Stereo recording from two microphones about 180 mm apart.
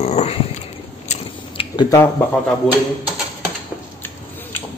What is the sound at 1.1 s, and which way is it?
Biting, 30° left (ahead or behind).